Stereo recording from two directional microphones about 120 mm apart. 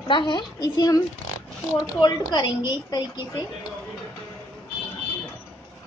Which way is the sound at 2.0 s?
35° left (ahead or behind).